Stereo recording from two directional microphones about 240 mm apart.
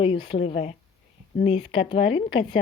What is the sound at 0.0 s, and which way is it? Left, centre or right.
A woman's voice, left.